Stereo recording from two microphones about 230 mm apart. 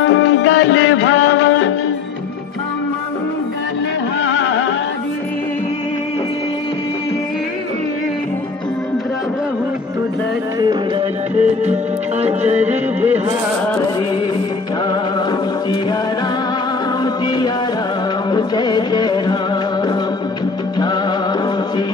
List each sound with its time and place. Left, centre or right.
0.0 s music: left
4.2 s music: left
10.6 s music: centre
12.4 s music: centre
18.3 s music: centre
20.8 s music: centre